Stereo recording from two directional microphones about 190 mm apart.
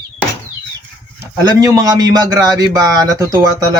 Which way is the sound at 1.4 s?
20° right (ahead or behind).